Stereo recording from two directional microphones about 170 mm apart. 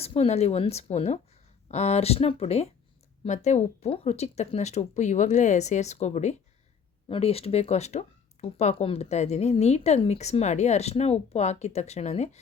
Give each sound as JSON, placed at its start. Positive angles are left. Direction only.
{"t": 0.0, "sound": "speech", "side_deg": 35}